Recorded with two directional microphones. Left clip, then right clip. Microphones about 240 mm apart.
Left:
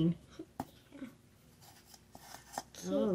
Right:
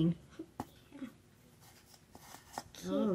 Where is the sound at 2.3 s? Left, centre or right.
Centre.